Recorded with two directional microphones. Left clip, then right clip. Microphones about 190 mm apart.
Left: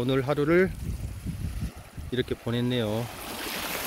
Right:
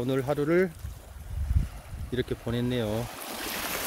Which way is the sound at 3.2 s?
35° right (ahead or behind).